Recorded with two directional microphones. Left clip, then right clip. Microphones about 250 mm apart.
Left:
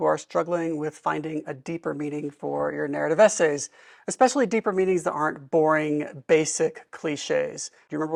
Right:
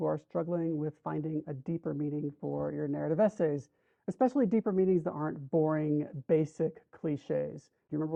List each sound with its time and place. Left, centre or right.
0.0 s speech: centre